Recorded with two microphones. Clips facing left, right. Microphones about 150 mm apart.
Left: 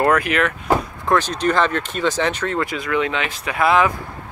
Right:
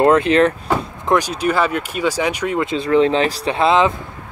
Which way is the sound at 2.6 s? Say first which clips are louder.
Right 9 dB; 30° right (ahead or behind).